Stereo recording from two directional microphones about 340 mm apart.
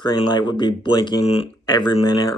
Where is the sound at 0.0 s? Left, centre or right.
Centre.